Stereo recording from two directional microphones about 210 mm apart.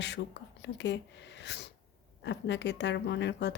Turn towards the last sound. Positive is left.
turn(degrees=55)  # may be behind; listen again after turning